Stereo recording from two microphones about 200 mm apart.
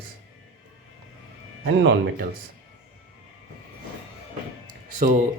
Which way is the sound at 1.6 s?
45° right (ahead or behind).